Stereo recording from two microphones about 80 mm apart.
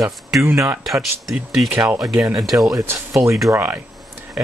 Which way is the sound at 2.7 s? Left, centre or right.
Right.